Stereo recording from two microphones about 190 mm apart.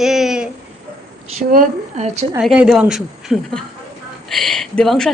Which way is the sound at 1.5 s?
40° right (ahead or behind).